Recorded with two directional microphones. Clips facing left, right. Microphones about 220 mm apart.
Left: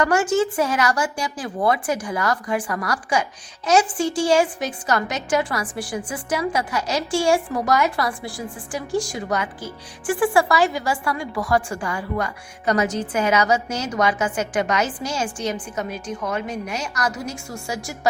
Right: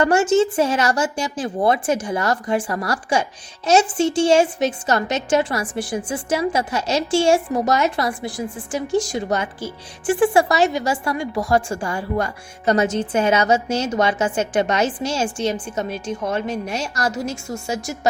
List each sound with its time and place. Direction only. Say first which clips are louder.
0.0 s a woman's voice: right 3 dB; 25° right (ahead or behind)